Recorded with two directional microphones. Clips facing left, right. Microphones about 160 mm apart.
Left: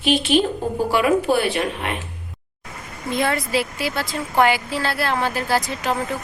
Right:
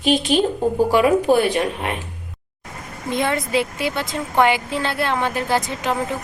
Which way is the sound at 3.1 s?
20° right (ahead or behind).